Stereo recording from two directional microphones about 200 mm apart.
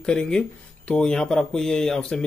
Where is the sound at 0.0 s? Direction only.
5° left (ahead or behind).